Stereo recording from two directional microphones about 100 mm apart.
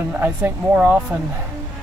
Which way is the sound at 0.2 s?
20° right (ahead or behind).